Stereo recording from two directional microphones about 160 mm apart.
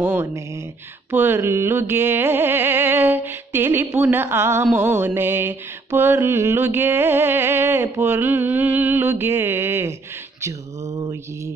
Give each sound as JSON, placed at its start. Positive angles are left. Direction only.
{"t": 0.0, "sound": "mantra", "side_deg": -15}